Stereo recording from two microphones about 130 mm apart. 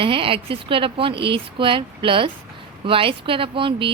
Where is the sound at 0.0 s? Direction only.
45° right (ahead or behind).